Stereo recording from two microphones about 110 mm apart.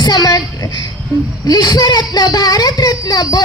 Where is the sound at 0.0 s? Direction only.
40° left (ahead or behind).